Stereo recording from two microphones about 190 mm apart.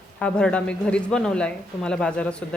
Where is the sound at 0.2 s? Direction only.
5° left (ahead or behind).